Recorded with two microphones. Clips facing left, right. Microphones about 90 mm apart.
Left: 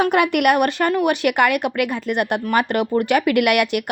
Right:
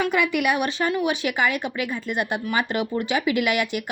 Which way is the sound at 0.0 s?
60° left (ahead or behind).